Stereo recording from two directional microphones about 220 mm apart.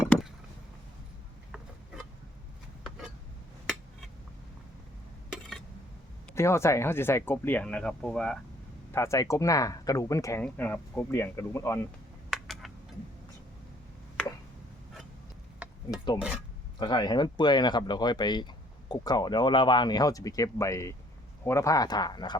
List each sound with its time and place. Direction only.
6.3 s speech: 10° left (ahead or behind)
12.3 s a sound: centre (ahead or behind)
15.9 s speech: 20° left (ahead or behind)